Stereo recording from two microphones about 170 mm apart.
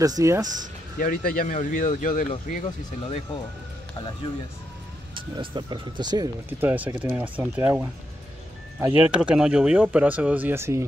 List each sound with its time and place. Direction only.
0.0 s speech: 20° right (ahead or behind)
0.9 s speech: 55° left (ahead or behind)
5.1 s speech: 25° right (ahead or behind)
6.6 s speech: 10° right (ahead or behind)